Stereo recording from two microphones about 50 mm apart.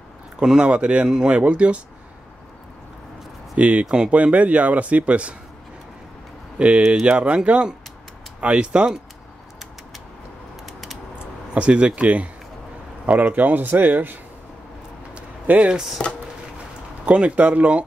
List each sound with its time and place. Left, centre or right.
0.4 s speech: centre
3.5 s speech: right
3.8 s speech: centre
4.1 s speech: right
6.6 s speech: right
11.5 s speech: right
15.1 s a sound: right
16.0 s speech: centre
17.0 s speech: right